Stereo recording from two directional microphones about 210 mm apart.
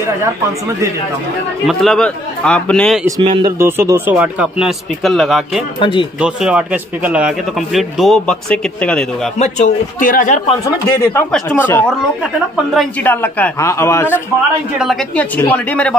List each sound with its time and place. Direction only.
1.7 s a man's voice: centre (ahead or behind)
3.1 s speech: 20° right (ahead or behind)
3.5 s speech: 10° right (ahead or behind)
5.8 s speech: 25° left (ahead or behind)
6.1 s a man's voice: 5° right (ahead or behind)
9.4 s a man's voice: 35° left (ahead or behind)
10.6 s a man's voice: 10° left (ahead or behind)
14.8 s a man's voice: centre (ahead or behind)